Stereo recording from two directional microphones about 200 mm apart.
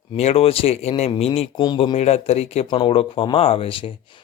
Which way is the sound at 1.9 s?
30° left (ahead or behind).